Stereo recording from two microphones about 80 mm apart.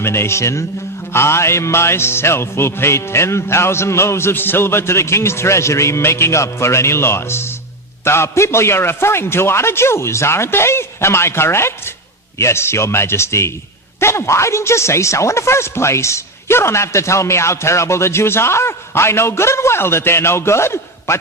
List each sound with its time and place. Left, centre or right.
0.0 s speech: left